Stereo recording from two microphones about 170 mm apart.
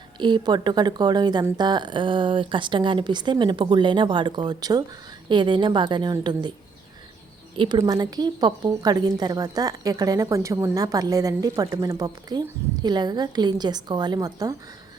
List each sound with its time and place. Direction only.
0.2 s a woman's voice: 25° right (ahead or behind)
7.5 s a woman's voice: 30° right (ahead or behind)